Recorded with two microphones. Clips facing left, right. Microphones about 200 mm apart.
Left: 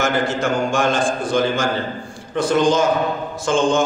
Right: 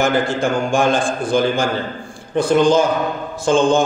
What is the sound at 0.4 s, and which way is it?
A man's voice, 55° right (ahead or behind).